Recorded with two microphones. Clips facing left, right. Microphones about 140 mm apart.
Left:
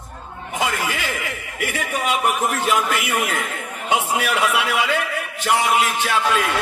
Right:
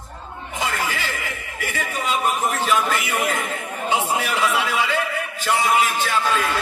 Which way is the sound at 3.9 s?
65° left (ahead or behind).